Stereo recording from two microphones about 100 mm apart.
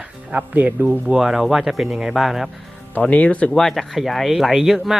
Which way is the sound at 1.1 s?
5° right (ahead or behind).